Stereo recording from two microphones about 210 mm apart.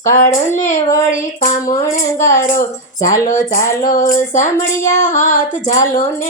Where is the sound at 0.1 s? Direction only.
35° left (ahead or behind).